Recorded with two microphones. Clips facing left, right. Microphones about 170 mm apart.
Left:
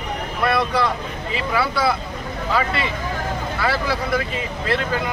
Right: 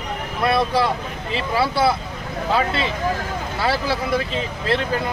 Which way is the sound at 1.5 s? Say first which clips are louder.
Right 2 dB; 30° right (ahead or behind).